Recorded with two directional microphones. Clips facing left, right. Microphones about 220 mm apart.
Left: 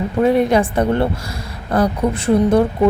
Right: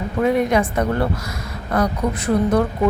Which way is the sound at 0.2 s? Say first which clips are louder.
Left 3 dB; 30° left (ahead or behind).